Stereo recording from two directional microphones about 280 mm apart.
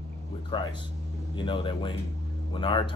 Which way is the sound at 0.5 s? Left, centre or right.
Centre.